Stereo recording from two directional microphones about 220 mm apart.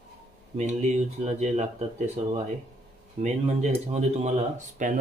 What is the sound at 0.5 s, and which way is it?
Speech, 35° right (ahead or behind).